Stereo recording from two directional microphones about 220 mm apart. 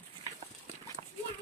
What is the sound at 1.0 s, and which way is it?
Horse, 30° right (ahead or behind).